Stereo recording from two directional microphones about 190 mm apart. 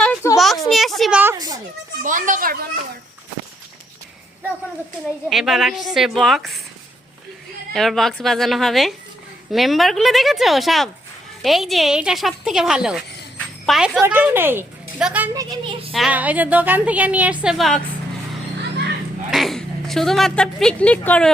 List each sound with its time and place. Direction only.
0.0 s a sound: 10° left (ahead or behind)
1.2 s a child's voice: 15° right (ahead or behind)
2.0 s speech: 45° right (ahead or behind)
5.3 s a woman's voice: centre (ahead or behind)
7.7 s a woman's voice: centre (ahead or behind)
15.3 s speech: 20° right (ahead or behind)
15.9 s a woman's voice: 5° right (ahead or behind)
19.3 s speech: centre (ahead or behind)